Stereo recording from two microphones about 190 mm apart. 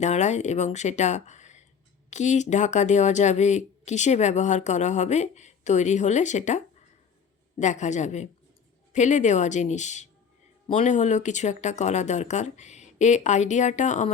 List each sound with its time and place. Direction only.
0.0 s speech: 35° left (ahead or behind)
7.6 s speech: 40° left (ahead or behind)